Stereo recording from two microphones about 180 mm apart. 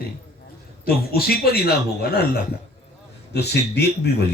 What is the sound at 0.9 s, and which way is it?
A man's voice, 55° left (ahead or behind).